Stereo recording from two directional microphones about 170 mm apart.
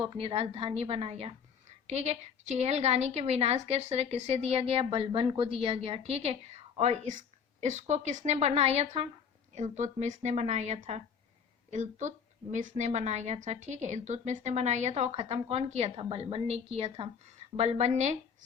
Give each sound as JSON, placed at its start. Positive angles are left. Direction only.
{"t": 0.0, "sound": "a woman's voice", "side_deg": -30}